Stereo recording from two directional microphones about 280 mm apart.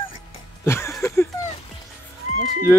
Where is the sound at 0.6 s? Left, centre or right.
Centre.